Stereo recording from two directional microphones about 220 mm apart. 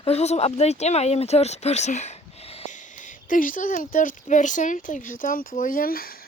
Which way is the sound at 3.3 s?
40° left (ahead or behind).